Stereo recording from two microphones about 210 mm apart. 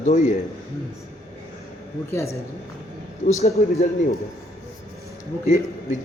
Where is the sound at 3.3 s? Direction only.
30° left (ahead or behind).